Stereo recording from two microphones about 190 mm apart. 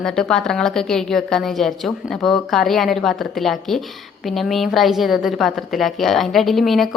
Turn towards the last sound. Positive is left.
turn(degrees=0)  # may be behind; listen again after turning